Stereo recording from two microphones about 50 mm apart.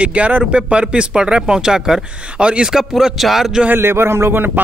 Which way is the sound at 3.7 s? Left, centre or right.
Right.